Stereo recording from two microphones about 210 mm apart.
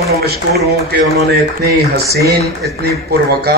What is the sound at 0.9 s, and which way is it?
Speech, 50° right (ahead or behind).